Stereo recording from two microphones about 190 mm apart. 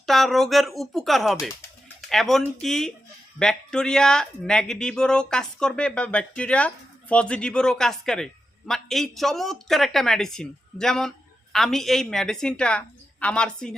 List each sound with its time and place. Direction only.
0.0 s speech: centre (ahead or behind)